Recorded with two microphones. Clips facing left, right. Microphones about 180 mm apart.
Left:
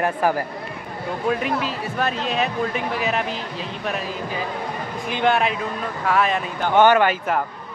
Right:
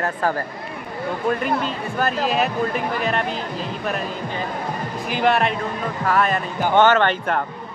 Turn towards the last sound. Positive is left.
turn(degrees=5)  # may be behind; listen again after turning